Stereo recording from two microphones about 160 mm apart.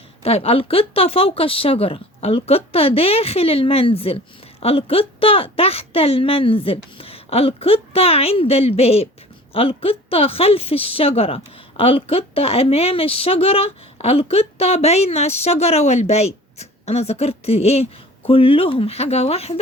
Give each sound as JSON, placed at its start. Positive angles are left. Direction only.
{"t": 0.2, "sound": "a woman's voice", "side_deg": 40}